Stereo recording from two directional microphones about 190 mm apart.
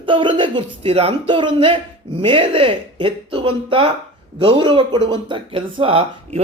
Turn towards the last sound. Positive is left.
turn(degrees=-30)  # may be behind; listen again after turning